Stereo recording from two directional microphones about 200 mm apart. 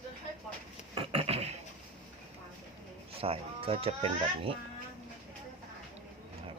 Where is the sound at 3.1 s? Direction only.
30° right (ahead or behind).